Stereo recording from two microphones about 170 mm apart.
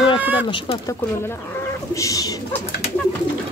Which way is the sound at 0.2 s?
10° right (ahead or behind).